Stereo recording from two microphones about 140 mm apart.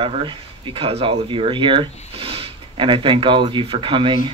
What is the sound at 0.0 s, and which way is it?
Speech, 35° right (ahead or behind).